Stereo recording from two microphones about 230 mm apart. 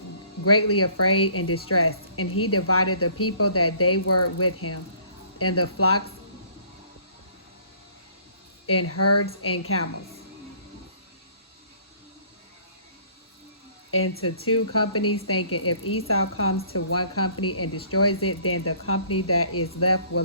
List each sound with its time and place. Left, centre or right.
0.4 s speech: left
8.6 s speech: left
14.0 s speech: left
14.4 s speech: left
16.7 s speech: left